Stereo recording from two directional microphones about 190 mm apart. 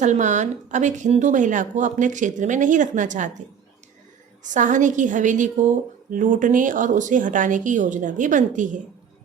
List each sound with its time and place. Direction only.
0.0 s a woman's voice: 40° right (ahead or behind)
4.4 s a woman's voice: 40° right (ahead or behind)